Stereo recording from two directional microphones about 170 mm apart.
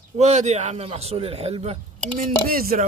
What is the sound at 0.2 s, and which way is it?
A man's voice, 45° right (ahead or behind).